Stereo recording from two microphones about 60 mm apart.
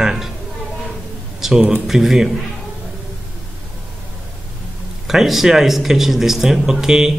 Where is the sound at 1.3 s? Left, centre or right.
Centre.